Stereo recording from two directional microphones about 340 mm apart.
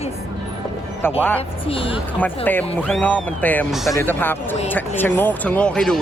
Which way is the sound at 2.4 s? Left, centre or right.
Centre.